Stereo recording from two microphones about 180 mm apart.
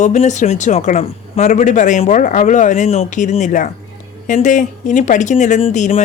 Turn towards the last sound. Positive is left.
turn(degrees=35)  # may be behind; listen again after turning